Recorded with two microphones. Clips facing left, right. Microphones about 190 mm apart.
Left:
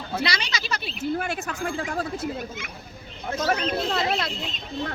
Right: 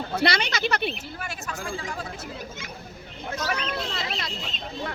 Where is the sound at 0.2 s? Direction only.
55° right (ahead or behind).